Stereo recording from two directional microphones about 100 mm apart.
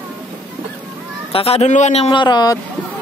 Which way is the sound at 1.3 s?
85° left.